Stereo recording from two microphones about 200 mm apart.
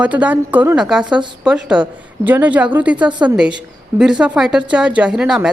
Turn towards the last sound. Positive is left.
turn(degrees=-5)  # may be behind; listen again after turning